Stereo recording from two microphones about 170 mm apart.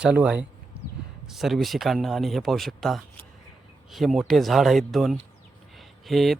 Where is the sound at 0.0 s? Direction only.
5° right (ahead or behind).